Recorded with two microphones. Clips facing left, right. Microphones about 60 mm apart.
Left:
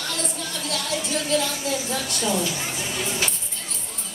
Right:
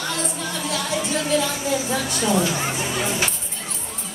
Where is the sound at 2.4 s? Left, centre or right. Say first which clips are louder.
Right 5 dB; right.